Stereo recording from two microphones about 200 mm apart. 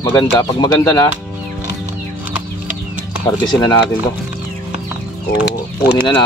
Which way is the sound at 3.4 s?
20° left (ahead or behind).